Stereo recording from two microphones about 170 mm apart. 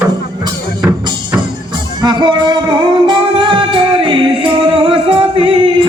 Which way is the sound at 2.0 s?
25° right (ahead or behind).